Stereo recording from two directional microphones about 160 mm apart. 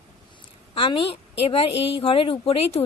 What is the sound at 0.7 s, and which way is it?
A woman's voice, 30° left (ahead or behind).